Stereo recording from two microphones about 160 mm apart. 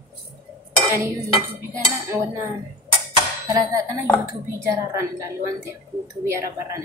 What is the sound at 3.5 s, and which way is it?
A woman's voice, 20° right (ahead or behind).